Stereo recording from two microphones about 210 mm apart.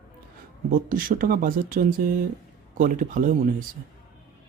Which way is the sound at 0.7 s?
40° right (ahead or behind).